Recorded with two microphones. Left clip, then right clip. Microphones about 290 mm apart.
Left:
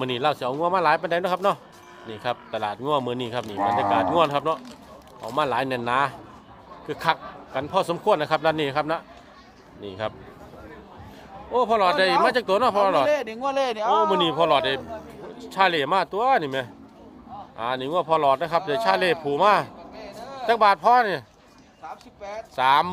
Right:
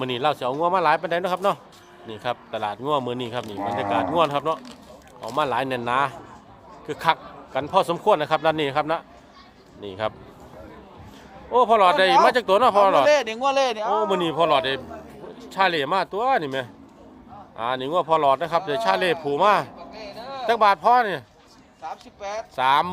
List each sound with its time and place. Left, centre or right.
0.0 s speech: centre
11.5 s speech: centre
13.1 s speech: right
13.5 s speech: centre
13.7 s speech: centre
19.9 s a sound: centre
20.5 s speech: centre
22.2 s speech: centre
22.5 s speech: centre